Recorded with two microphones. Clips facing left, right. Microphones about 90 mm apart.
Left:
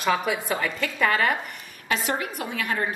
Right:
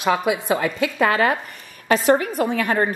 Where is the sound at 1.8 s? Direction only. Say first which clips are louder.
Right 10 dB; 40° right (ahead or behind).